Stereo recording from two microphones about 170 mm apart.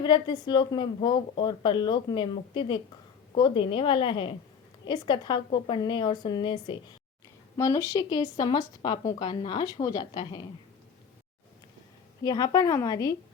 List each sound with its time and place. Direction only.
0.0 s speech: 25° left (ahead or behind)
12.2 s speech: 20° left (ahead or behind)